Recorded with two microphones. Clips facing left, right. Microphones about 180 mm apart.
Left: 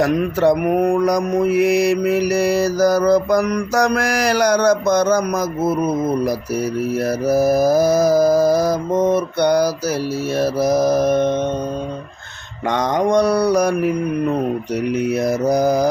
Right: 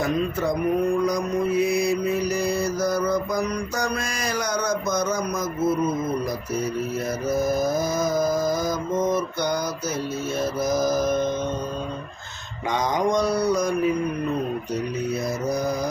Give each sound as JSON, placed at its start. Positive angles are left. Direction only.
{"t": 0.0, "sound": "mantra", "side_deg": 70}
{"t": 12.6, "sound": "mantra", "side_deg": 65}
{"t": 14.9, "sound": "mantra", "side_deg": 80}